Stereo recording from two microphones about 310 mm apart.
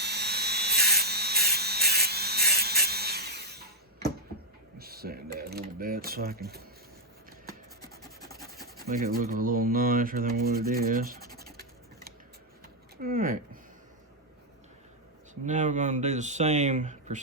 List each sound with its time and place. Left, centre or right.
0.0 s a sound: right
4.8 s mechanisms: right
7.8 s scratch: centre
8.6 s speech: right
13.0 s a sound: right
15.4 s speech: right